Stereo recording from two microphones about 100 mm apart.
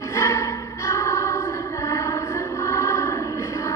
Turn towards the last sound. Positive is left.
turn(degrees=30)  # may be behind; listen again after turning